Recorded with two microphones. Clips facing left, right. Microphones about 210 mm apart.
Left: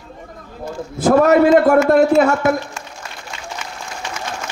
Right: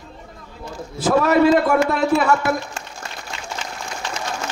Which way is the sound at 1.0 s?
50° left (ahead or behind).